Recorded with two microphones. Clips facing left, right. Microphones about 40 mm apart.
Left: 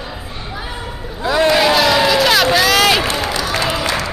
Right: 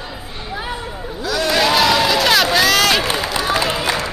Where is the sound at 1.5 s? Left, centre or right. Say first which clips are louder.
Right 3 dB; centre.